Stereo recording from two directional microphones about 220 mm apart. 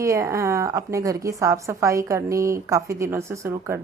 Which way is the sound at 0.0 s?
15° right (ahead or behind).